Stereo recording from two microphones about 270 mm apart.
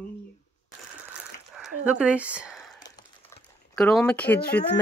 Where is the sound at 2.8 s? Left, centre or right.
Centre.